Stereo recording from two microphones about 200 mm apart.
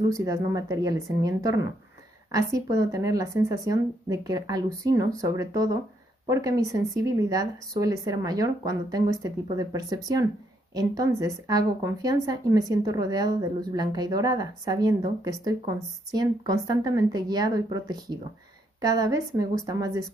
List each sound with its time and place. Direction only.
0.1 s a woman's voice: 15° right (ahead or behind)